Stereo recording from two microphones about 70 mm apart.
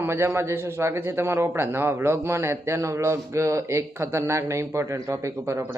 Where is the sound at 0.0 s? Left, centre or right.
Right.